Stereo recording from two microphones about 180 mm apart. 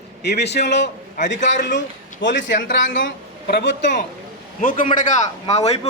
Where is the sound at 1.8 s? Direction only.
85° left.